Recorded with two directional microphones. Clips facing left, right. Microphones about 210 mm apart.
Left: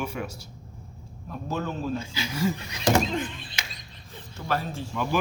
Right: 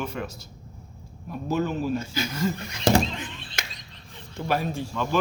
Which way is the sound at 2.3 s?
10° left (ahead or behind).